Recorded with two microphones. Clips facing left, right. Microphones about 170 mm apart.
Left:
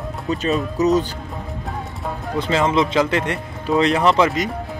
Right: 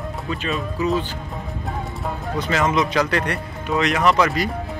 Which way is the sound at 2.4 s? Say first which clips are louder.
Left 2 dB; 25° left (ahead or behind).